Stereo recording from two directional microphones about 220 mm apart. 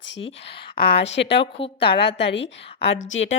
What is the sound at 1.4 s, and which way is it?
Speech, 25° left (ahead or behind).